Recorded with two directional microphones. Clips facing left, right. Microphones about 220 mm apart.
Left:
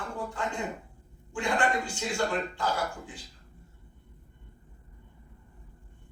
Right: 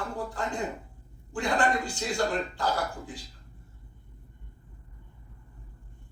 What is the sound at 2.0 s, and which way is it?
A man's voice, 35° right (ahead or behind).